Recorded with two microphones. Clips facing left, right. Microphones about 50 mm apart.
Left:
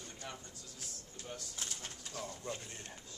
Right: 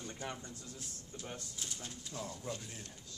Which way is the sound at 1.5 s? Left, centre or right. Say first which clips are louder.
Even; left.